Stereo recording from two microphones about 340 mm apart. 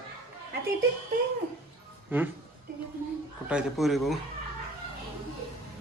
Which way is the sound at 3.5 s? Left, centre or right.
Centre.